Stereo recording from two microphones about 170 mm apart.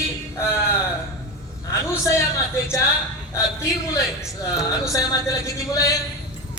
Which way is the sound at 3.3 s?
15° left (ahead or behind).